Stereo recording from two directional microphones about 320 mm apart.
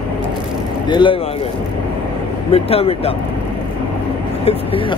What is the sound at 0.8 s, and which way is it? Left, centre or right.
Speech, centre.